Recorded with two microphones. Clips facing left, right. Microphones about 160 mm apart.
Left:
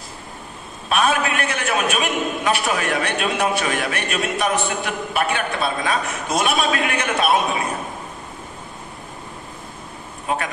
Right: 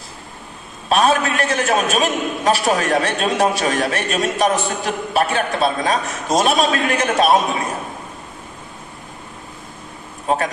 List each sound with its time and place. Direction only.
0.8 s a man's voice: 35° right (ahead or behind)
10.2 s a man's voice: 35° right (ahead or behind)